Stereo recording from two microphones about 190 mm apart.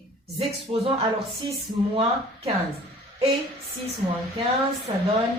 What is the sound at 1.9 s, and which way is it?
Speech, 30° right (ahead or behind).